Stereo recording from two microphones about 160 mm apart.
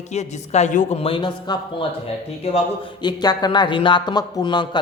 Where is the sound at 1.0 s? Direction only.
30° left (ahead or behind).